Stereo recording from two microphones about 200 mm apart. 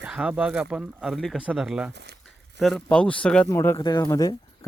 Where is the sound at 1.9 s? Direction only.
55° right (ahead or behind).